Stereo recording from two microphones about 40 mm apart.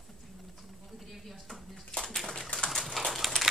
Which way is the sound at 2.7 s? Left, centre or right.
Centre.